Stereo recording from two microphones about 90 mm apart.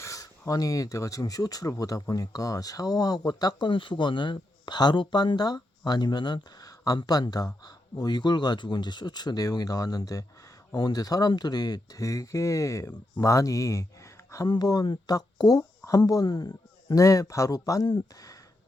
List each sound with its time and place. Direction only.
0.0 s speech: 35° left (ahead or behind)
3.7 s speech: 65° left (ahead or behind); by 14.4 s 35° left (ahead or behind)
14.4 s speech: 50° left (ahead or behind)